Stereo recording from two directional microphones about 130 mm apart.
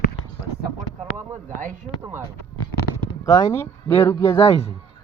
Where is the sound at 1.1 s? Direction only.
70° right (ahead or behind).